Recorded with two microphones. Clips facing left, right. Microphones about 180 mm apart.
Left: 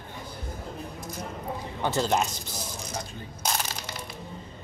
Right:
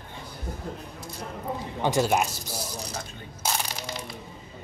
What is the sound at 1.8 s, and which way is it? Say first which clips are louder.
Speech: right 2 dB; 15° right (ahead or behind).